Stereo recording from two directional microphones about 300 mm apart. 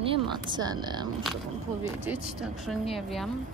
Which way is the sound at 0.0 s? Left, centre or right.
Centre.